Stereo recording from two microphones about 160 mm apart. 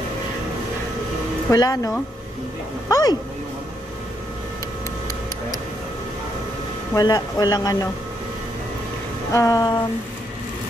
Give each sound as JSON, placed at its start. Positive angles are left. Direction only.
{"t": 1.5, "sound": "speech", "side_deg": 20}
{"t": 2.9, "sound": "speech", "side_deg": 20}
{"t": 7.0, "sound": "speech", "side_deg": 20}
{"t": 9.3, "sound": "speech", "side_deg": 20}